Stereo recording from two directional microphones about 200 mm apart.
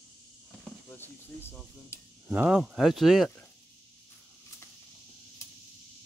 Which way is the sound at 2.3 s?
5° right (ahead or behind).